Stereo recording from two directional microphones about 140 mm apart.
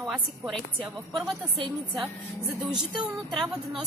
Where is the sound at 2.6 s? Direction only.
5° right (ahead or behind).